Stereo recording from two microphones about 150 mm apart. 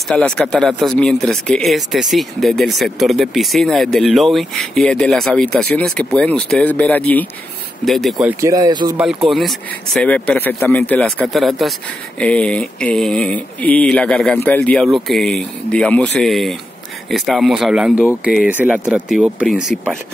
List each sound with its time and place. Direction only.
0.1 s speech: 5° left (ahead or behind)
8.3 s speech: 20° right (ahead or behind)
8.9 s speech: 5° right (ahead or behind)